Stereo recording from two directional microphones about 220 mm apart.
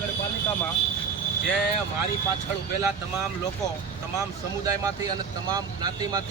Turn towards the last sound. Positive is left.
turn(degrees=-15)  # may be behind; listen again after turning